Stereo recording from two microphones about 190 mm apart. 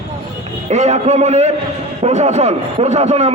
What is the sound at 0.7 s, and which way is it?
A man's voice, 35° right (ahead or behind).